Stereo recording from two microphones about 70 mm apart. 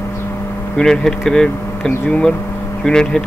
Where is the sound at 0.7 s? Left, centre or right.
Centre.